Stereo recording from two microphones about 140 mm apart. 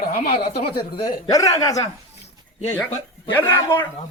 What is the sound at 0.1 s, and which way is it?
Speech, 90° left.